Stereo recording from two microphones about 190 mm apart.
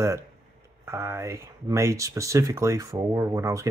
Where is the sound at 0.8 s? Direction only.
15° right (ahead or behind).